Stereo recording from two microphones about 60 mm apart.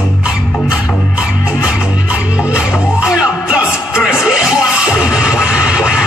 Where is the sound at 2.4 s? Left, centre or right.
Centre.